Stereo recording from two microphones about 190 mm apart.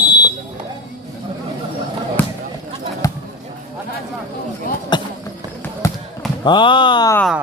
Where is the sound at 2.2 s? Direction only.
10° left (ahead or behind).